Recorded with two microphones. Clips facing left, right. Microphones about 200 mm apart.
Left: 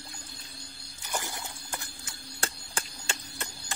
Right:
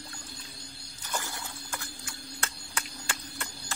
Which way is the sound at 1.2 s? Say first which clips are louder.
Left 1 dB; 20° left (ahead or behind).